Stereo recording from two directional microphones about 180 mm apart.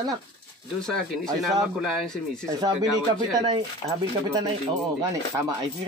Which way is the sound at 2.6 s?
20° right (ahead or behind).